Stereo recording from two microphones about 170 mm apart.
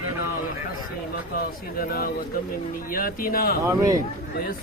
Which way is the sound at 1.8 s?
60° left (ahead or behind).